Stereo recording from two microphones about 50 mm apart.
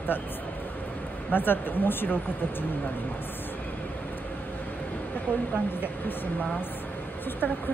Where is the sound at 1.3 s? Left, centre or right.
Left.